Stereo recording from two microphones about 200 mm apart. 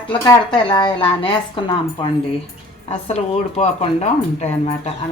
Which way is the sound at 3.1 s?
30° left (ahead or behind).